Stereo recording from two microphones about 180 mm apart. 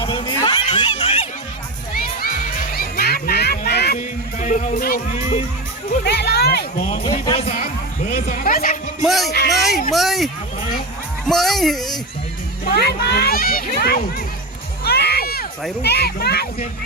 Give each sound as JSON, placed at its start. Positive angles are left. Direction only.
{"t": 0.0, "sound": "a sound", "side_deg": 25}
{"t": 2.2, "sound": "music", "side_deg": 55}
{"t": 4.4, "sound": "music", "side_deg": 45}
{"t": 6.1, "sound": "speech", "side_deg": 65}
{"t": 6.9, "sound": "speech", "side_deg": 30}
{"t": 7.4, "sound": "speech", "side_deg": 50}
{"t": 9.0, "sound": "speech", "side_deg": 0}
{"t": 11.3, "sound": "speech", "side_deg": 0}
{"t": 12.6, "sound": "speech", "side_deg": 65}
{"t": 14.8, "sound": "crowd", "side_deg": 60}
{"t": 15.8, "sound": "speech", "side_deg": 60}